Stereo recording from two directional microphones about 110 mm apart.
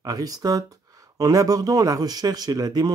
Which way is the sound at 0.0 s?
35° right (ahead or behind).